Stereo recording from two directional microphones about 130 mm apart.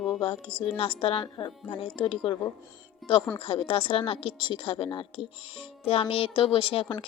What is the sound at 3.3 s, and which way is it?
A woman's voice, 45° left (ahead or behind).